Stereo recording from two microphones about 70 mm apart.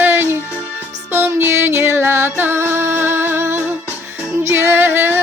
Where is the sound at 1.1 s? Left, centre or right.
Right.